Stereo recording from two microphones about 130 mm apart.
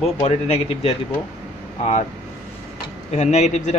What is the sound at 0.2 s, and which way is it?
Speech, 50° left (ahead or behind).